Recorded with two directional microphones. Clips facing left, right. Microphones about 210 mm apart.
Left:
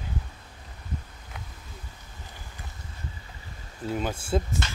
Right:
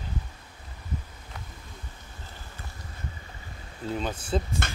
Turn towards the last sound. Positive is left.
turn(degrees=-55)  # may be behind; listen again after turning